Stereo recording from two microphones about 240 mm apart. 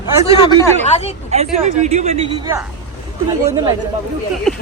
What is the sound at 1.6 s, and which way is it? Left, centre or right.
Speech, right.